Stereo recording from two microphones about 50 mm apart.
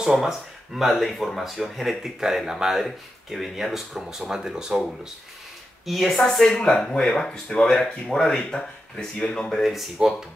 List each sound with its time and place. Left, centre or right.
0.0 s speech: centre
0.7 s speech: centre
5.9 s speech: centre
9.6 s speech: centre